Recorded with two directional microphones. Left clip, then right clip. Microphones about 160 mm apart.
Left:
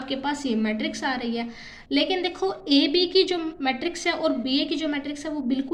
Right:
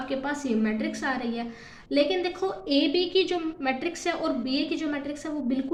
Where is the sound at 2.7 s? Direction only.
40° left (ahead or behind).